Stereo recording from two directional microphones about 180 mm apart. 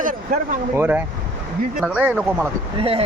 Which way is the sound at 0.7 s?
10° right (ahead or behind).